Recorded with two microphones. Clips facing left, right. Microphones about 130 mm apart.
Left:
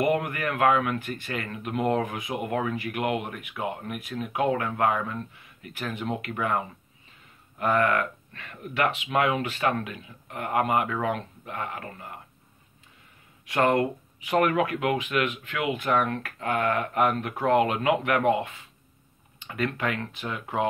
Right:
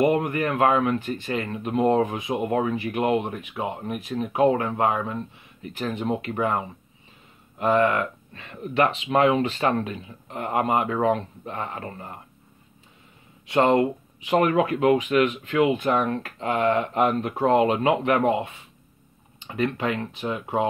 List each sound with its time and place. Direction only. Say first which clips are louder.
0.0 s speech: right 4 dB; 25° right (ahead or behind)
13.5 s speech: right 4 dB; 25° right (ahead or behind)